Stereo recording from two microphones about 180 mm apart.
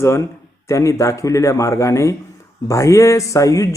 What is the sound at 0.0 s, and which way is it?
Speech, 15° left (ahead or behind).